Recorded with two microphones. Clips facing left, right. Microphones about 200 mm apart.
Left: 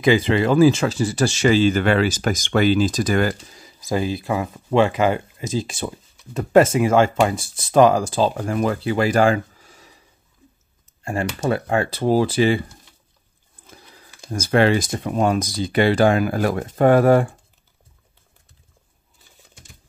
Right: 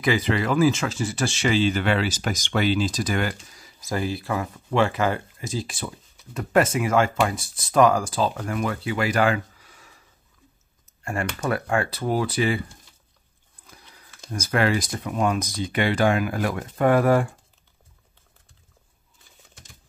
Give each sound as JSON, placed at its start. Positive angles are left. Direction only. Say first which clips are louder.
{"t": 0.0, "sound": "speech", "louder": "left 6 dB", "side_deg": 25}
{"t": 3.5, "sound": "speech", "louder": "left 5 dB", "side_deg": 20}
{"t": 11.1, "sound": "speech", "louder": "left 4 dB", "side_deg": 30}
{"t": 13.7, "sound": "a sound", "louder": "left 5 dB", "side_deg": 30}
{"t": 14.3, "sound": "speech", "louder": "left 6 dB", "side_deg": 30}